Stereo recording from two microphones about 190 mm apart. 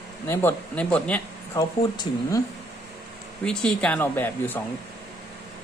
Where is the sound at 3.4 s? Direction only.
5° left (ahead or behind).